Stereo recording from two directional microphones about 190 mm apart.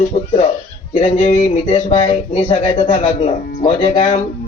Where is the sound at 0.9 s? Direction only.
30° left (ahead or behind).